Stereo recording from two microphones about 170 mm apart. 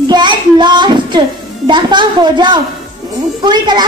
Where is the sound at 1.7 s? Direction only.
25° right (ahead or behind).